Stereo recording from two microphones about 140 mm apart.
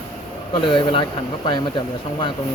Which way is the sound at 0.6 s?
40° left (ahead or behind).